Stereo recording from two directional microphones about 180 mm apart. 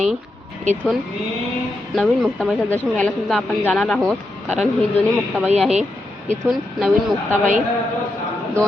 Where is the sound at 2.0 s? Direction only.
Centre (ahead or behind).